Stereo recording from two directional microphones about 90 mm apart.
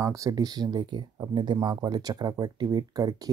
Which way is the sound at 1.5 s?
45° right (ahead or behind).